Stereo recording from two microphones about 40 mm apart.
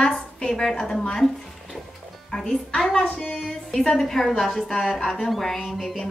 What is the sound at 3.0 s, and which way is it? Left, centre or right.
Music, left.